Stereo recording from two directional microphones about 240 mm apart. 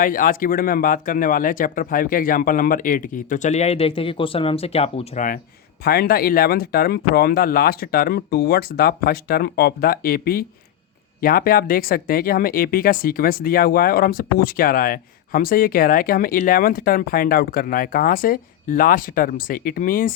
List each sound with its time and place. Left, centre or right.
0.0 s speech: left